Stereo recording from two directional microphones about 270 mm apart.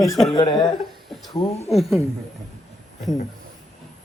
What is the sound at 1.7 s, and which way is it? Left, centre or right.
Speech, centre.